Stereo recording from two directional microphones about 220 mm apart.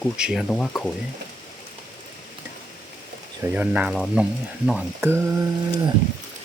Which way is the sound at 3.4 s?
5° right (ahead or behind).